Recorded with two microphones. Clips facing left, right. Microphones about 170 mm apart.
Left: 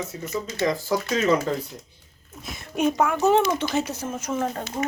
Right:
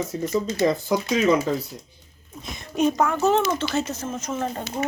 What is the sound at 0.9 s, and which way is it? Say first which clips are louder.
Speech: left 1 dB; 15° right (ahead or behind).